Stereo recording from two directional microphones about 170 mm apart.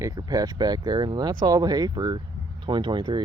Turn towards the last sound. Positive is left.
turn(degrees=-25)  # may be behind; listen again after turning